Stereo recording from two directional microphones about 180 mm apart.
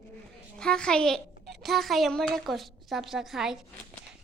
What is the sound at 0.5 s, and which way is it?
A woman's voice, 5° left (ahead or behind).